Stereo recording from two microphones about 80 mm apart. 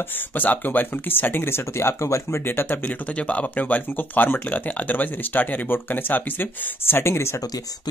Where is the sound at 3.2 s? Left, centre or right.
Centre.